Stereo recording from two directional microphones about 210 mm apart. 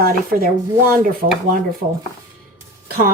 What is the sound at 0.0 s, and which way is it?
Speech, 45° right (ahead or behind).